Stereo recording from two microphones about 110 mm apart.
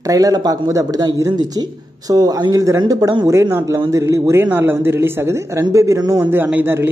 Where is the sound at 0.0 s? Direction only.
35° right (ahead or behind).